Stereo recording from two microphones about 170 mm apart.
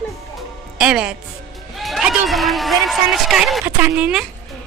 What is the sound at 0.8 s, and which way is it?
Music, 5° right (ahead or behind).